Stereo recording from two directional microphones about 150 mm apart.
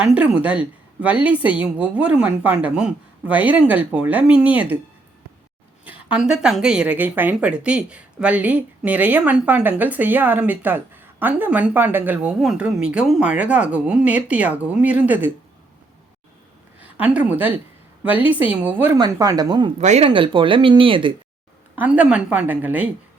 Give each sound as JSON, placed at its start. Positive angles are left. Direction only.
{"t": 0.0, "sound": "speech", "side_deg": -5}
{"t": 5.8, "sound": "speech", "side_deg": -10}
{"t": 16.8, "sound": "a woman's voice", "side_deg": -10}
{"t": 18.9, "sound": "a woman's voice", "side_deg": -25}
{"t": 19.8, "sound": "speech", "side_deg": -50}
{"t": 20.1, "sound": "speech", "side_deg": -35}
{"t": 21.8, "sound": "speech", "side_deg": -10}